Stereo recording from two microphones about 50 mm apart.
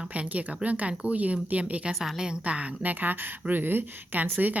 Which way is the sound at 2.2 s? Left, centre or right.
Centre.